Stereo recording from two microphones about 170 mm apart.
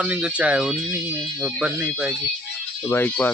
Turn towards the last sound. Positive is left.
turn(degrees=10)  # may be behind; listen again after turning